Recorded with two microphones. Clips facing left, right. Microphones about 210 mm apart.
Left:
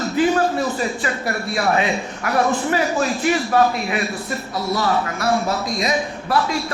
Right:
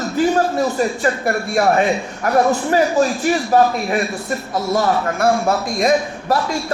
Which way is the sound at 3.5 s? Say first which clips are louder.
Right 3 dB; 40° right (ahead or behind).